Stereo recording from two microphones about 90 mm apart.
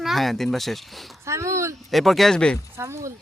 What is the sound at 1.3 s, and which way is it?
Speech, 35° right (ahead or behind).